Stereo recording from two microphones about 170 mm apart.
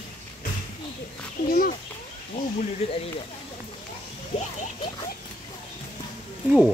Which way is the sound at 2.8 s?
35° left (ahead or behind).